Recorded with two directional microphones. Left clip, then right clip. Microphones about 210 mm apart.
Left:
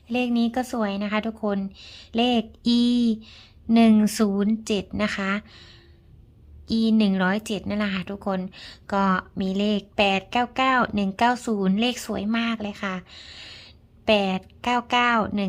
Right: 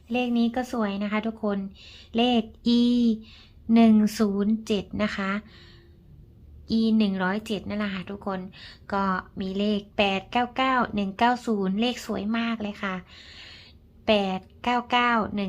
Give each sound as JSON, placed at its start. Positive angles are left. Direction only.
{"t": 0.1, "sound": "speech", "side_deg": 20}